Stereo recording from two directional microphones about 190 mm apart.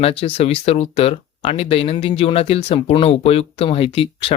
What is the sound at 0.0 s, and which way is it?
Speech, 30° left (ahead or behind).